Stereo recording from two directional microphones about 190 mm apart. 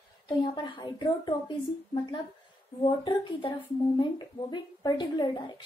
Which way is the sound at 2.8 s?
25° left (ahead or behind).